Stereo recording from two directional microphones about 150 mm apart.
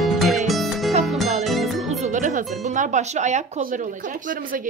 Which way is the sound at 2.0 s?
55° right (ahead or behind).